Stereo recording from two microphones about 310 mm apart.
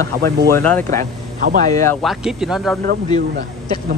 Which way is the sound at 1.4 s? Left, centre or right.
Right.